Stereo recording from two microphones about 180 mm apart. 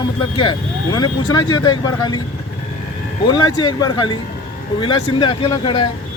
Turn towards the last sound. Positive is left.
turn(degrees=25)  # may be behind; listen again after turning